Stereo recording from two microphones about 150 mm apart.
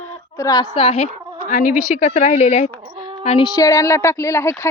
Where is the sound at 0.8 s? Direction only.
45° left (ahead or behind).